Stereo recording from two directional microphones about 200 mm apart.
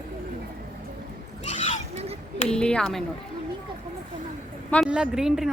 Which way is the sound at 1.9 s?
30° right (ahead or behind).